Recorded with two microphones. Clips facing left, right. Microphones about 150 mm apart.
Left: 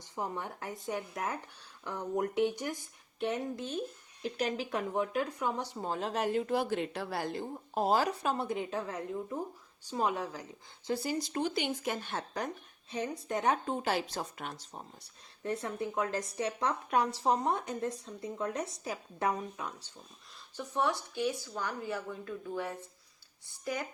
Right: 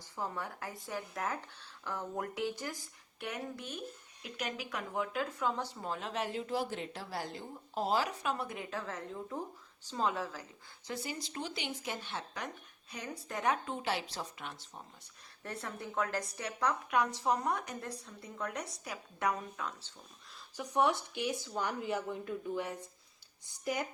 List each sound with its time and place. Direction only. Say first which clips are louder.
0.2 s speech: left 2 dB; 20° left (ahead or behind)
5.7 s speech: left 4 dB; 30° left (ahead or behind); by 10.4 s 15° left (ahead or behind)
10.8 s speech: left 7 dB; 35° left (ahead or behind)
11.3 s speech: left 7 dB; 50° left (ahead or behind)
12.4 s speech: left 5 dB; 40° left (ahead or behind)
12.9 s speech: left 7 dB; 20° left (ahead or behind)
13.8 s speech: left 4 dB; 45° left (ahead or behind)
15.4 s speech: left 7 dB; 20° left (ahead or behind)
20.6 s speech: right 2 dB; 15° right (ahead or behind)